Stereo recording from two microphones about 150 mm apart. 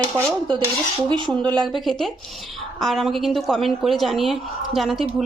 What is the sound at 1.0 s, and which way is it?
Speech, 30° right (ahead or behind).